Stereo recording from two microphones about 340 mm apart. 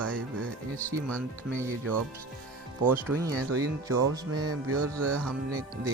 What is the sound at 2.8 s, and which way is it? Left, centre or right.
Speech, centre.